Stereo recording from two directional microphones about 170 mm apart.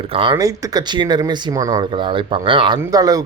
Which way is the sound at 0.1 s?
30° right (ahead or behind).